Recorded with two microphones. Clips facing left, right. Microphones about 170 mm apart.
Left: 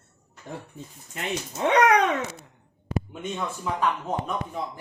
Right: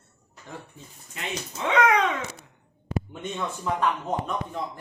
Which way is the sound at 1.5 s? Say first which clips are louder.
Left 3 dB; 50° left (ahead or behind).